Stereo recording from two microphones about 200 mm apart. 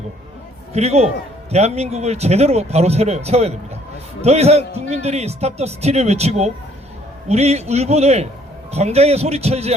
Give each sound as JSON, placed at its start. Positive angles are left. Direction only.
{"t": 0.7, "sound": "a man's voice", "side_deg": -30}